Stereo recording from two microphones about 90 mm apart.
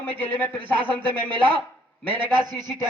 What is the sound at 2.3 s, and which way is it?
Speech, 55° right (ahead or behind).